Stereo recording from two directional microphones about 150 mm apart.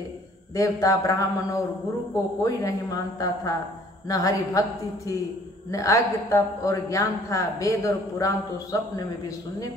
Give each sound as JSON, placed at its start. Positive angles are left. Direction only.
{"t": 0.6, "sound": "a man's voice", "side_deg": 20}